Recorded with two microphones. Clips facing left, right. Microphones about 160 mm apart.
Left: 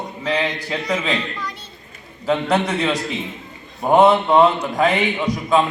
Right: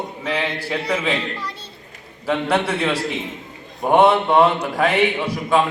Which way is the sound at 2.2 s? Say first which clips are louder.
Left 1 dB; 5° right (ahead or behind).